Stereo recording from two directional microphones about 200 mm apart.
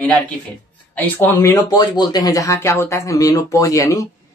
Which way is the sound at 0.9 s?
10° left (ahead or behind).